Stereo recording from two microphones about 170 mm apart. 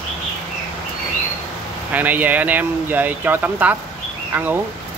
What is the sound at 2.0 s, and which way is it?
Speech, 10° right (ahead or behind).